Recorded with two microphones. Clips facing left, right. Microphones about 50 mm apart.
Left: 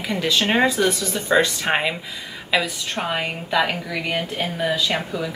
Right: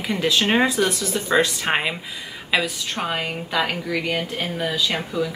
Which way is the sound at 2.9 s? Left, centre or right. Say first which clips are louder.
Left 2 dB; left.